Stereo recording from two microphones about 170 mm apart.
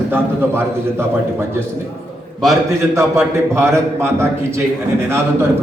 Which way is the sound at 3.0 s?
15° right (ahead or behind).